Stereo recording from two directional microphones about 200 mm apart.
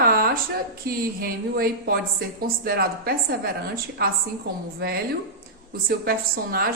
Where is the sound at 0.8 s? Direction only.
45° right (ahead or behind).